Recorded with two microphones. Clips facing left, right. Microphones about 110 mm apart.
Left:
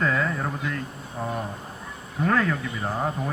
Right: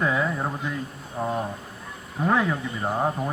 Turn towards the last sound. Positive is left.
turn(degrees=-20)  # may be behind; listen again after turning